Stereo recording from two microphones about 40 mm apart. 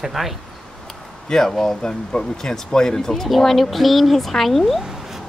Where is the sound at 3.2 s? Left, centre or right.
Centre.